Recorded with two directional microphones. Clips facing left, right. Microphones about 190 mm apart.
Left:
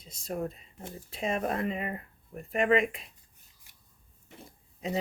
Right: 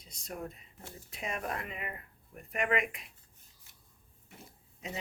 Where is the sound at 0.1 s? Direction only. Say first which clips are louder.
Left 7 dB; 30° left (ahead or behind).